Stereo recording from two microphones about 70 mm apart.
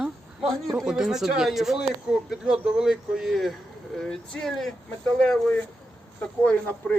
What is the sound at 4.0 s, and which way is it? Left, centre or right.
Speech, centre.